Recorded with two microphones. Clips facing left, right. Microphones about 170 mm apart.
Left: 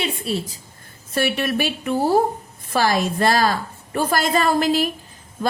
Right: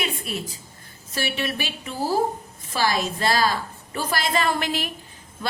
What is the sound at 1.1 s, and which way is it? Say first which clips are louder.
A woman's voice: left 6 dB; 50° left (ahead or behind).